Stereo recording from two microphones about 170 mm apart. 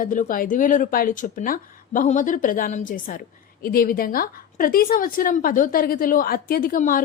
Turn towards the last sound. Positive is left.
turn(degrees=55)  # may be behind; listen again after turning